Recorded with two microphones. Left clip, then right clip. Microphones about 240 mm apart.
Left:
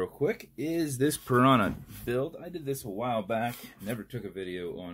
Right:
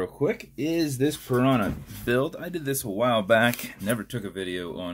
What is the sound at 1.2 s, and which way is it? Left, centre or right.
Speech, left.